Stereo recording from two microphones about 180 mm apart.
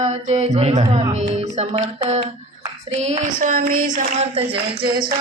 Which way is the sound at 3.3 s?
55° right (ahead or behind).